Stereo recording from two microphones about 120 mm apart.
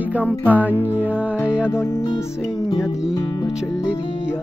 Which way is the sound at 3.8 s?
10° right (ahead or behind).